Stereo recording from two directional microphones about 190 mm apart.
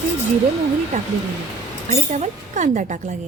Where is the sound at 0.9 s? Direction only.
35° right (ahead or behind).